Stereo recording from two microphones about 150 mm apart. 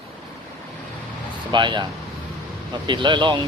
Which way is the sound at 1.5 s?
30° right (ahead or behind).